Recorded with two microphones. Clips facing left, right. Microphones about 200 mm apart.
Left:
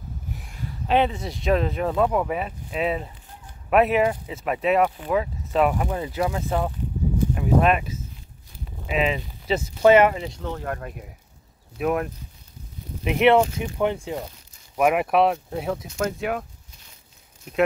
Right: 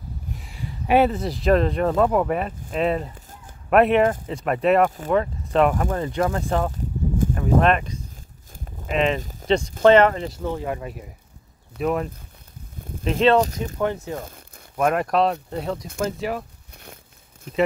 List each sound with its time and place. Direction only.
0.4 s speech: 5° right (ahead or behind)
9.2 s a sound: 45° right (ahead or behind)
9.5 s speech: 5° left (ahead or behind)
10.4 s speech: 10° right (ahead or behind); by 14.2 s 15° left (ahead or behind)
14.2 s crumpling: 50° right (ahead or behind)
14.8 s speech: 10° left (ahead or behind)
16.7 s a sound: 60° right (ahead or behind)